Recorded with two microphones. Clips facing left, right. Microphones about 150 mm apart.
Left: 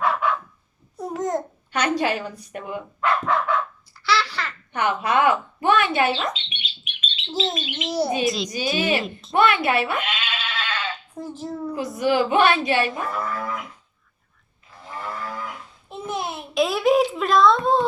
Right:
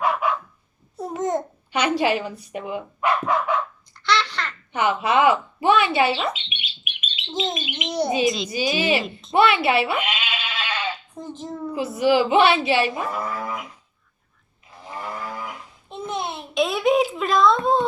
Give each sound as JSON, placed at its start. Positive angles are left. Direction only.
{"t": 0.0, "sound": "dog", "side_deg": -10}
{"t": 0.9, "sound": "a child's voice", "side_deg": 0}
{"t": 4.0, "sound": "babbling", "side_deg": 5}
{"t": 4.7, "sound": "a child's voice", "side_deg": -10}
{"t": 7.9, "sound": "a woman's voice", "side_deg": 5}
{"t": 11.2, "sound": "a child's voice", "side_deg": 5}
{"t": 14.8, "sound": "livestock", "side_deg": -15}
{"t": 15.9, "sound": "babbling", "side_deg": 5}